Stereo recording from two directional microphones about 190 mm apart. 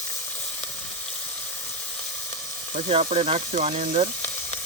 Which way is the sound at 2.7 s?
30° right (ahead or behind).